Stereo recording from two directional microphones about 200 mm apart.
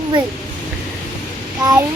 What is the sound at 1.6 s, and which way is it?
Speech, 20° right (ahead or behind).